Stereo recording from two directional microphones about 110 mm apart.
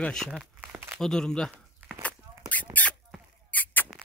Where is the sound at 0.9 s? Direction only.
5° left (ahead or behind).